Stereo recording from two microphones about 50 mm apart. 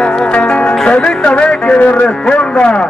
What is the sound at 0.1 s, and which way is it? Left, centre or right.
Music, left.